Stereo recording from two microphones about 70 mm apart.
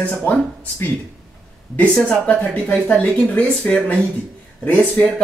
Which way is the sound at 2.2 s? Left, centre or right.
Left.